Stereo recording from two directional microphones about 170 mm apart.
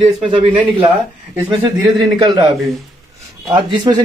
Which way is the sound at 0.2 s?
30° right (ahead or behind).